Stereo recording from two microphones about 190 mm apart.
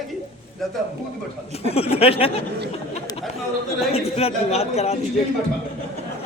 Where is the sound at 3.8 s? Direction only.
30° left (ahead or behind).